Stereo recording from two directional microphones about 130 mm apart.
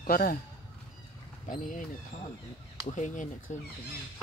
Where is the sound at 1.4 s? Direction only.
85° left.